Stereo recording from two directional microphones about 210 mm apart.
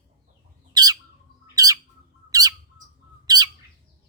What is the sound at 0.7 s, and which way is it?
Bird, 20° right (ahead or behind).